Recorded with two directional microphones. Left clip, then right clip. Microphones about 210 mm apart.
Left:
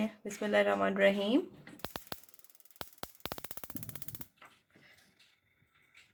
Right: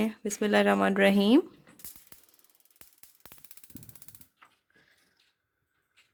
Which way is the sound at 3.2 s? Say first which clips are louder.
Left 12 dB; 35° left (ahead or behind).